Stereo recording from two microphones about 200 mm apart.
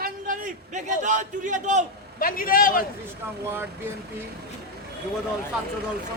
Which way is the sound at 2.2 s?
45° left (ahead or behind).